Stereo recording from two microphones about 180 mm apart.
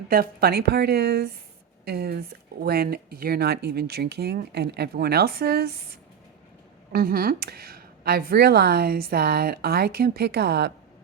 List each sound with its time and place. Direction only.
0.1 s speech: 55° right (ahead or behind)
6.9 s speech: 55° right (ahead or behind)